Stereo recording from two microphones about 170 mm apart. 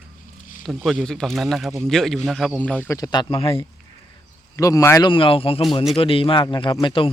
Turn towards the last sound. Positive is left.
turn(degrees=30)  # may be behind; listen again after turning